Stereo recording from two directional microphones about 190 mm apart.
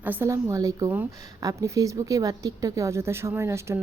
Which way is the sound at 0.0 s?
10° right (ahead or behind).